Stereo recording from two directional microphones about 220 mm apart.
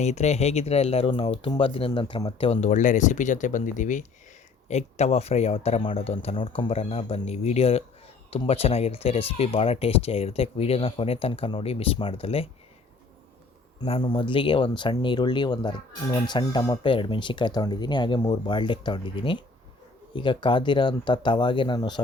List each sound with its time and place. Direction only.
0.0 s speech: 30° left (ahead or behind)
13.8 s speech: 25° left (ahead or behind)